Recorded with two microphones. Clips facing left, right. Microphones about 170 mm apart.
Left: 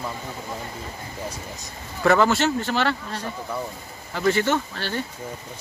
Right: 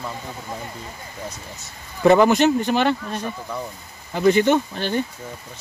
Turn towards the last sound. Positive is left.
turn(degrees=-15)  # may be behind; listen again after turning